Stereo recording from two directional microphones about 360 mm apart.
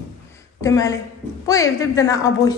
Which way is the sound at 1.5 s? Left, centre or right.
Centre.